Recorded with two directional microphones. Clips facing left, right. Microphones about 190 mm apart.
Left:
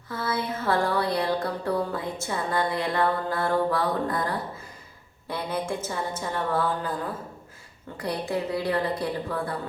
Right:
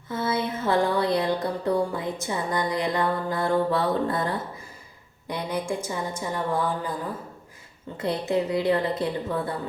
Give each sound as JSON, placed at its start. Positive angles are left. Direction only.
{"t": 0.1, "sound": "music", "side_deg": -20}
{"t": 5.3, "sound": "music", "side_deg": -15}
{"t": 7.9, "sound": "music", "side_deg": -20}